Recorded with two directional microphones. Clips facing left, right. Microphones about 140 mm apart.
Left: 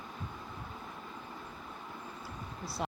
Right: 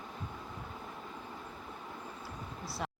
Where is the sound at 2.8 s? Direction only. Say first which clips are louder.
Left 3 dB; 20° left (ahead or behind).